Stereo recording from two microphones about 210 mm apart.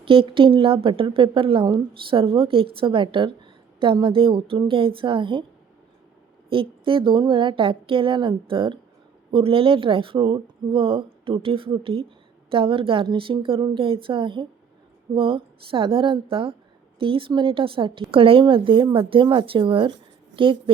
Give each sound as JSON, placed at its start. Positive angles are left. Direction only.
{"t": 0.0, "sound": "a woman's voice", "side_deg": -25}
{"t": 6.5, "sound": "a woman's voice", "side_deg": -25}